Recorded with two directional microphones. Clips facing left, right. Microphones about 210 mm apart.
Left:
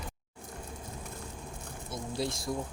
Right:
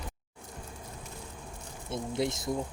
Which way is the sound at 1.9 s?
20° right (ahead or behind).